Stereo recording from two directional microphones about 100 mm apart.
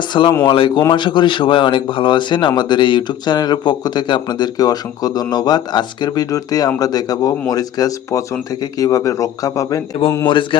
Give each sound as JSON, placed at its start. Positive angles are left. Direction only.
{"t": 0.1, "sound": "speech", "side_deg": 50}
{"t": 0.4, "sound": "mantra", "side_deg": 60}
{"t": 0.9, "sound": "speech", "side_deg": 50}
{"t": 10.2, "sound": "mantra", "side_deg": 55}